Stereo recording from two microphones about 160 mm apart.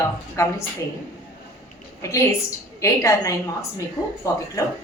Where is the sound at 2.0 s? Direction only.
20° left (ahead or behind).